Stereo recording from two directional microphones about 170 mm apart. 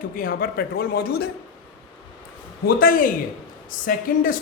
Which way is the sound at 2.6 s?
55° left (ahead or behind).